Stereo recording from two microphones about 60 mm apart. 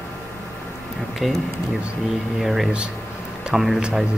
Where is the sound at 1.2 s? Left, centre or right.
Centre.